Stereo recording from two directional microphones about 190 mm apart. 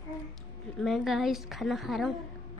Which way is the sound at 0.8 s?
Centre (ahead or behind).